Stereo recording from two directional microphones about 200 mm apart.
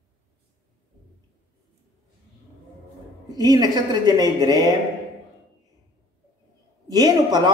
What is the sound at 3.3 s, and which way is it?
A man's voice, 20° right (ahead or behind).